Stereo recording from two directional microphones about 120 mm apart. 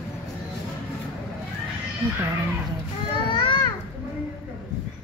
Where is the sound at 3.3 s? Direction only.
45° left (ahead or behind).